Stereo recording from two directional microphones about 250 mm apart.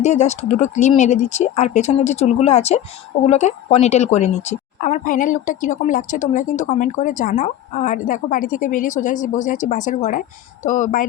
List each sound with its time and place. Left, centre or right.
0.0 s speech: left